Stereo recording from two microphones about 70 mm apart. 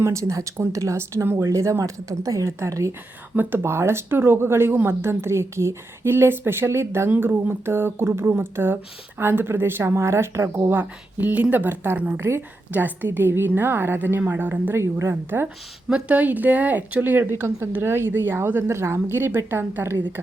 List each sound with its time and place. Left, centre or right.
0.0 s speech: right
3.3 s a woman's voice: right
11.2 s a woman's voice: right
15.1 s a woman's voice: right
15.9 s a woman's voice: centre; by 20.2 s right